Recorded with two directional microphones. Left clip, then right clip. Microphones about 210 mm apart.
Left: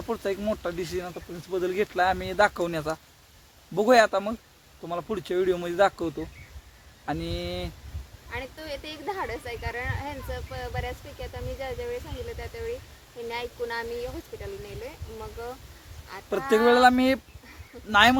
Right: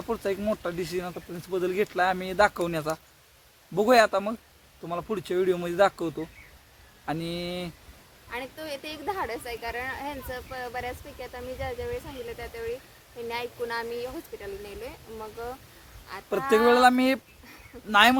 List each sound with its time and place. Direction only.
0.1 s speech: 10° left (ahead or behind)
8.3 s speech: 10° right (ahead or behind)
13.2 s speech: 10° right (ahead or behind)
16.6 s speech: 10° left (ahead or behind)